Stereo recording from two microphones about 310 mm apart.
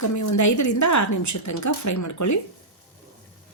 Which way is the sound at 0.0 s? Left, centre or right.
Left.